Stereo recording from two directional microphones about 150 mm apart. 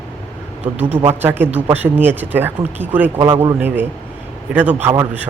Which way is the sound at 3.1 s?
30° right (ahead or behind).